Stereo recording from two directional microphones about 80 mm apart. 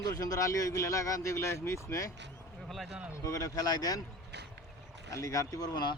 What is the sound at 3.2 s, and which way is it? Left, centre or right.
Speech, left.